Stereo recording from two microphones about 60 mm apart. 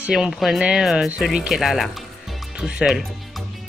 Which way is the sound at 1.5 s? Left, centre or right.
Centre.